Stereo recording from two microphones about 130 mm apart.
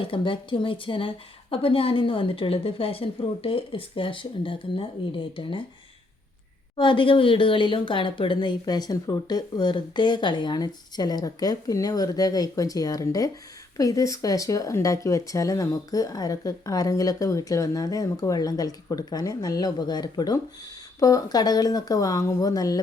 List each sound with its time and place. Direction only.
0.0 s a woman's voice: 40° left (ahead or behind)
6.7 s speech: 40° left (ahead or behind)